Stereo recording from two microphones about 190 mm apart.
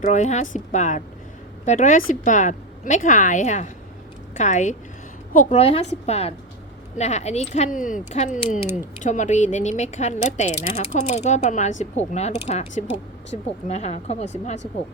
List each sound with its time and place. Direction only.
0.0 s speech: 40° left (ahead or behind)